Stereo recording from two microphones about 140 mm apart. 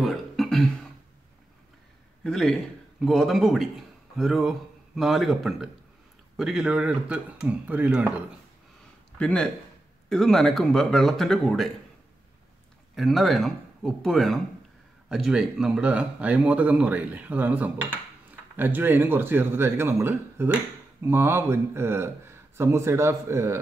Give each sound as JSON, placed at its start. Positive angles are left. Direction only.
{"t": 0.0, "sound": "beatboxing", "side_deg": 0}
{"t": 2.2, "sound": "speech", "side_deg": 5}
{"t": 9.2, "sound": "speech", "side_deg": 5}
{"t": 12.9, "sound": "speech", "side_deg": 0}